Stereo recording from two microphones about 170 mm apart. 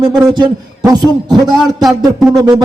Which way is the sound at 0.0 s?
25° right (ahead or behind).